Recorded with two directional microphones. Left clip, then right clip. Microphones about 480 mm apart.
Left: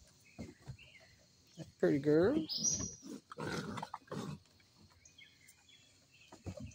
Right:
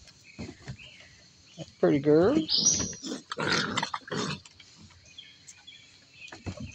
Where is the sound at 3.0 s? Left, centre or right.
Left.